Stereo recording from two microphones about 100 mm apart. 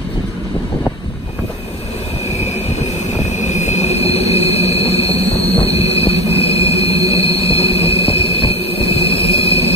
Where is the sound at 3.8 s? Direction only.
90° left.